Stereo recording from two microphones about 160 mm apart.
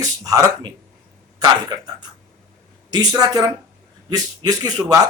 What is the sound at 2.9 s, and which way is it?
Speech, 25° right (ahead or behind).